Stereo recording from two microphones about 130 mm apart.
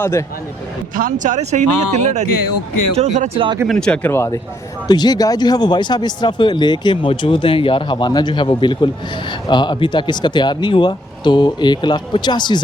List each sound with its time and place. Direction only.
0.0 s speech: 20° left (ahead or behind)
0.9 s speech: 85° right; by 2.2 s 65° right (ahead or behind)
2.9 s speech: 55° right (ahead or behind)
3.7 s speech: 5° left (ahead or behind)
4.9 s speech: 30° left (ahead or behind)